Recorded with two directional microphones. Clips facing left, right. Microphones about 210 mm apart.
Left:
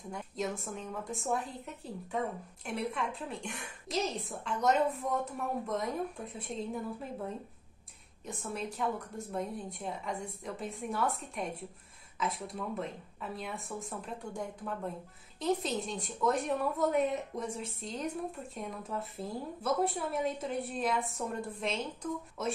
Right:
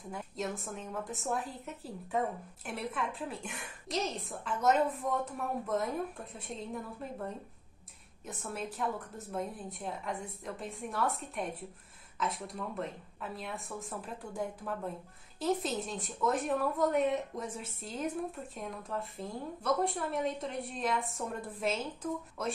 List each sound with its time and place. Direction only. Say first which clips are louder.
0.1 s a woman's voice: left 1 dB; centre (ahead or behind)